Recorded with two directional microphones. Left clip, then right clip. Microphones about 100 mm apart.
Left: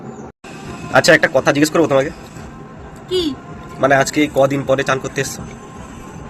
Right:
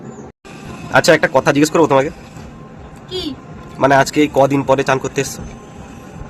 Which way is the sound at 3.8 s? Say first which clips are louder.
Right 2 dB; 55° right (ahead or behind).